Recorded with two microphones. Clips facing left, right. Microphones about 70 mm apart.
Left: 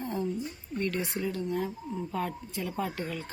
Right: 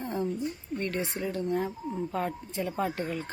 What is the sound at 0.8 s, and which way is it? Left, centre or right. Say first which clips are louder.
Speech: left 2 dB; right.